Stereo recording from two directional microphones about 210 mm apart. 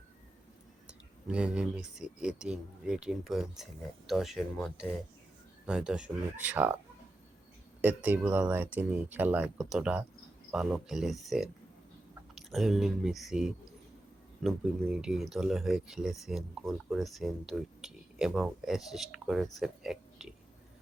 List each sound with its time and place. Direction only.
0.9 s speech: 5° right (ahead or behind)
7.8 s speech: 10° right (ahead or behind)